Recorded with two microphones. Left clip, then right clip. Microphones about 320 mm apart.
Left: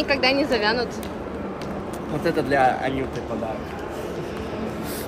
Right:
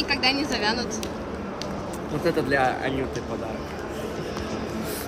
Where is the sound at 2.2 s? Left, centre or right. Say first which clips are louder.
Left 3 dB; centre.